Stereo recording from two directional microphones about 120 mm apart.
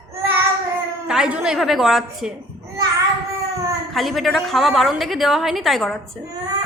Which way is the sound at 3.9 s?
Centre (ahead or behind).